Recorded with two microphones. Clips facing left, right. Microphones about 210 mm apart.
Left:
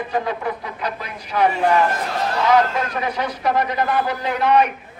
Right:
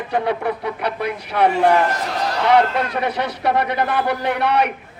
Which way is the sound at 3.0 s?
65° right (ahead or behind).